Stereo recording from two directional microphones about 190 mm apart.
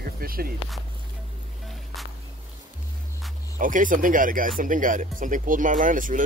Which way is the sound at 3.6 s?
45° right (ahead or behind).